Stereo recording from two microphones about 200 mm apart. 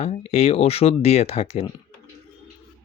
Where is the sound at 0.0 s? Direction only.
30° left (ahead or behind).